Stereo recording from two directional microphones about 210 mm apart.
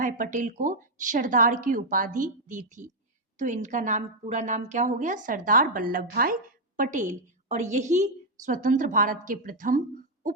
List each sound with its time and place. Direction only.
0.0 s a woman's voice: 40° right (ahead or behind)